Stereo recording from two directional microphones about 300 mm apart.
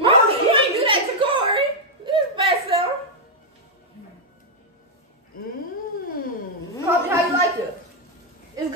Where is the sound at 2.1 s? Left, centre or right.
Centre.